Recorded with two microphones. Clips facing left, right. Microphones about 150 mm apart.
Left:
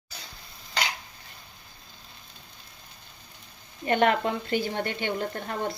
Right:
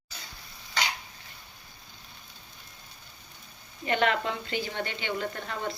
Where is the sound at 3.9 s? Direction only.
45° left (ahead or behind).